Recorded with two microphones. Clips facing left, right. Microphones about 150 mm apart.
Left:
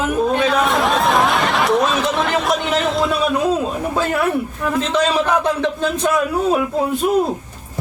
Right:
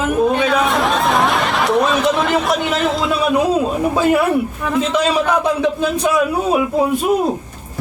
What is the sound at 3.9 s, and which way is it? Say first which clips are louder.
Speech: right 6 dB; 10° right (ahead or behind).